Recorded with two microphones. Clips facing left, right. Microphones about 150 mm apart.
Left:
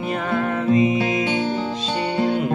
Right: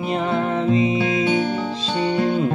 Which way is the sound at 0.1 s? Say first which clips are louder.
Right 2 dB; 20° right (ahead or behind).